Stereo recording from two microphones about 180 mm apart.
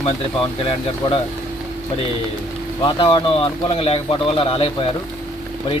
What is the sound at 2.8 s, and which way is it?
Speech, 30° left (ahead or behind).